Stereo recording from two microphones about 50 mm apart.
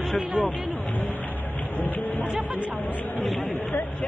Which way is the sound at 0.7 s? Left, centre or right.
Left.